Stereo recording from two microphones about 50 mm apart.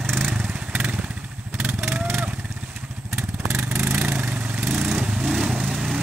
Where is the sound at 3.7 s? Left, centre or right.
Right.